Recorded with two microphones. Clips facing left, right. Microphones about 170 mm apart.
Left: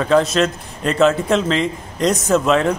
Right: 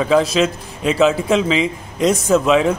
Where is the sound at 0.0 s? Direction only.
5° right (ahead or behind).